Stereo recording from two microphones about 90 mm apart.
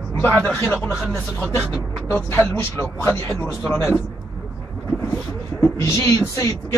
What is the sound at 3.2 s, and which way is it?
Speech, 10° left (ahead or behind).